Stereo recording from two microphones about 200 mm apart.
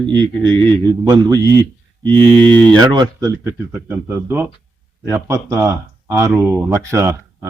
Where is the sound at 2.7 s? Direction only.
20° right (ahead or behind).